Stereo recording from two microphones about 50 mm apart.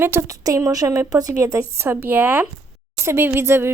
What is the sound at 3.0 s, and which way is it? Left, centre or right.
Speech, right.